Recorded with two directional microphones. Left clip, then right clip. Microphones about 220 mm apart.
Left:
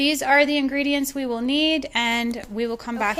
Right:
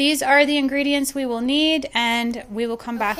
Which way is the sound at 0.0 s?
5° right (ahead or behind).